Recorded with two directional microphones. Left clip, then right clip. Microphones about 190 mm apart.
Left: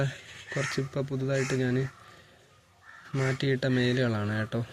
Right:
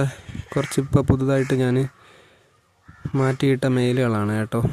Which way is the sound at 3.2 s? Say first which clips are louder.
Right 8 dB; 35° right (ahead or behind).